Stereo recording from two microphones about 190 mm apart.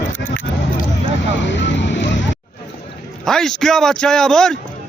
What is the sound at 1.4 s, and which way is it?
Vehicle, 70° left (ahead or behind).